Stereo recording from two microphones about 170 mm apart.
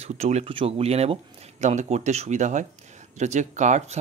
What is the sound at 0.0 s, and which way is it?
Speech, 40° right (ahead or behind).